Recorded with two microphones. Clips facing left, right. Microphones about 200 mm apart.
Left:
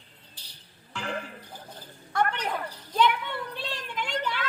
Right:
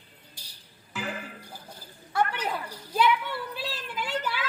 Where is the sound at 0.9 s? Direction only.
5° right (ahead or behind).